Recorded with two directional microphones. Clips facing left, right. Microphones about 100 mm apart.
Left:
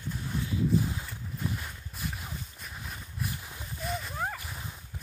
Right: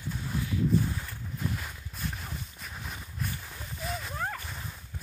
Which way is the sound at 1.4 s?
5° left (ahead or behind).